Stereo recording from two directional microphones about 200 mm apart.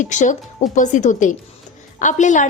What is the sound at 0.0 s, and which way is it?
A woman's voice, 40° left (ahead or behind).